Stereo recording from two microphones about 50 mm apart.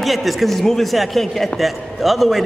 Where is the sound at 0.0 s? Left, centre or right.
Centre.